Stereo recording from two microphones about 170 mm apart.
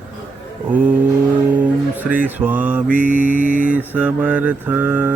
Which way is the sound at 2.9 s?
50° right (ahead or behind).